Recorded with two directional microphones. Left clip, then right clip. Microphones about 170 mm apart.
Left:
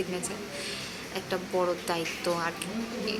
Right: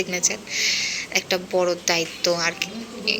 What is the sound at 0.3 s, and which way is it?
A woman's voice, 5° right (ahead or behind).